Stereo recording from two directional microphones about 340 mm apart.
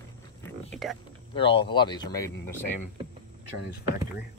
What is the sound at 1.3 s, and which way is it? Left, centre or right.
Speech, centre.